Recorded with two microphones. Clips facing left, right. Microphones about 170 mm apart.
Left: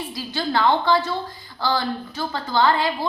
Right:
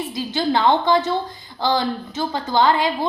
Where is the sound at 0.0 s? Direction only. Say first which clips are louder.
Right 5 dB; 20° right (ahead or behind).